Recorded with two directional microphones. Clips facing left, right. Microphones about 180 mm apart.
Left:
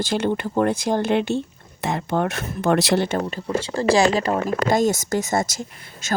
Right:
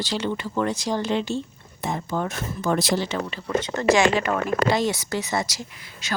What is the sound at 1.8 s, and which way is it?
Speech, 75° left (ahead or behind).